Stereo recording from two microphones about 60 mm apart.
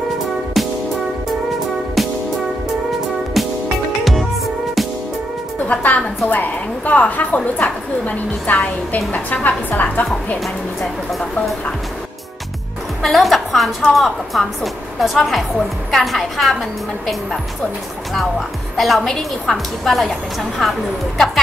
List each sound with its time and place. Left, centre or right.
0.6 s music: centre
2.0 s music: centre
3.4 s music: centre
5.8 s a woman's voice: left
10.4 s a woman's voice: centre
13.0 s a woman's voice: centre
18.8 s a woman's voice: centre